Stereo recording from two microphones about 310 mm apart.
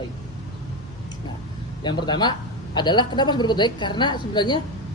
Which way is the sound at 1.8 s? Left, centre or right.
Centre.